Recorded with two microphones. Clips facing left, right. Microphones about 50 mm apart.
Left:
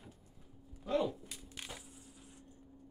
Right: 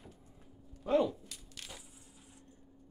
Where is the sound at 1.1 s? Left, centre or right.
Centre.